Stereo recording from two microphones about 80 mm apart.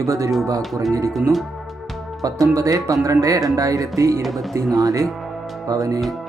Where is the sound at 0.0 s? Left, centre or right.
Right.